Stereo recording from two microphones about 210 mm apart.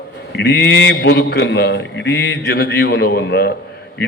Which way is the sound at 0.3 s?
55° left (ahead or behind).